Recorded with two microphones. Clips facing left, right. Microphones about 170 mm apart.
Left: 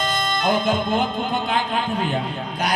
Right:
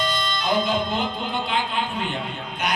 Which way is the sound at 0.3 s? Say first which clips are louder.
Left 4 dB; 50° left (ahead or behind).